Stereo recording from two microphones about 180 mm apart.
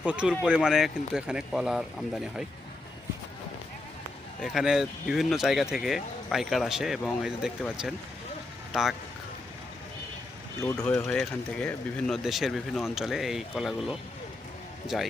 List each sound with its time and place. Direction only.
0.0 s speech: 5° right (ahead or behind)
4.4 s speech: centre (ahead or behind)
10.6 s speech: 15° left (ahead or behind)
10.8 s speech: 5° left (ahead or behind)
14.9 s speech: centre (ahead or behind)